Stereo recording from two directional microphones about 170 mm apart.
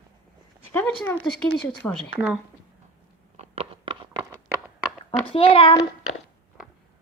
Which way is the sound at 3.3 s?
35° right (ahead or behind).